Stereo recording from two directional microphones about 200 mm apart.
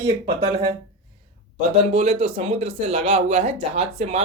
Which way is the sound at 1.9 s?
30° right (ahead or behind).